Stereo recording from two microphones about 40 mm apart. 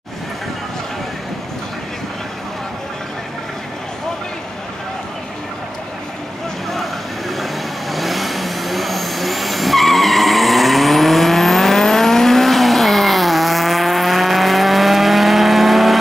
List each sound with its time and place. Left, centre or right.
6.7 s vehicle: centre